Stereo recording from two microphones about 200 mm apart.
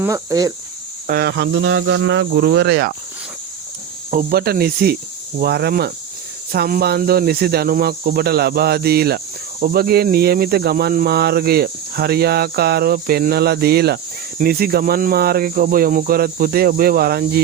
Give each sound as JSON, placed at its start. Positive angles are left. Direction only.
{"t": 0.0, "sound": "speech", "side_deg": -15}
{"t": 1.0, "sound": "speech", "side_deg": -50}
{"t": 4.1, "sound": "speech", "side_deg": -45}